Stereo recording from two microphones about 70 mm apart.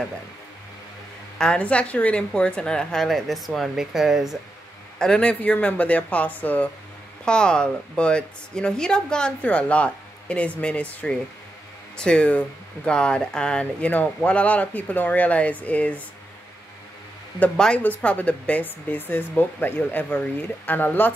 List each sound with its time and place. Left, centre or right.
1.4 s a woman's voice: centre
4.9 s speech: centre
7.2 s a woman's voice: centre
17.7 s speech: left